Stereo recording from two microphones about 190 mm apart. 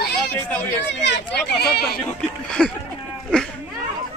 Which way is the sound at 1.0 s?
60° left (ahead or behind).